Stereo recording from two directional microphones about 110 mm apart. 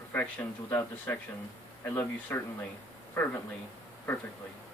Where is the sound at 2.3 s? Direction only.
20° left (ahead or behind).